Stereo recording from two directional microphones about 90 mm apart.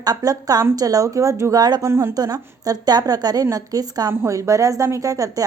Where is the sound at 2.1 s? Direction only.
45° right (ahead or behind).